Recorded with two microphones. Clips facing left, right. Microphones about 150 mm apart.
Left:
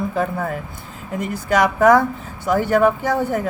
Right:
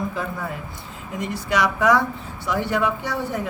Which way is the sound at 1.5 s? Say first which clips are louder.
Left 5 dB; 50° left (ahead or behind).